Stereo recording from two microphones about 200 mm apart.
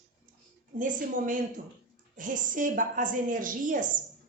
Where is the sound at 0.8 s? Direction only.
40° right (ahead or behind).